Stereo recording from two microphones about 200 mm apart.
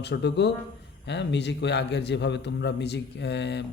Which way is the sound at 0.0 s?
60° left (ahead or behind).